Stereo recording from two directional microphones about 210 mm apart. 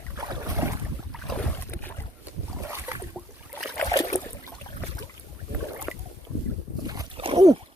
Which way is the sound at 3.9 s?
15° left (ahead or behind).